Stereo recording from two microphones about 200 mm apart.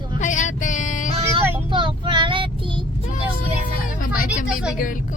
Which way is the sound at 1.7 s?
25° right (ahead or behind).